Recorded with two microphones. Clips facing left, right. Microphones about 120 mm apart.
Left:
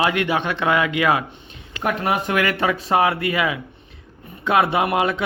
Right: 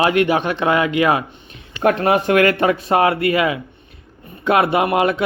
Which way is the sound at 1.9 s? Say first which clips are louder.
Right 6 dB; 60° right (ahead or behind).